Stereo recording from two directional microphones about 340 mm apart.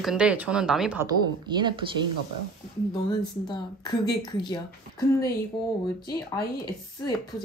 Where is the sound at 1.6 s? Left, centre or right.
Centre.